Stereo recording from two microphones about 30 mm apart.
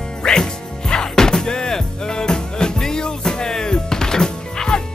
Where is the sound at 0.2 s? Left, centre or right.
Left.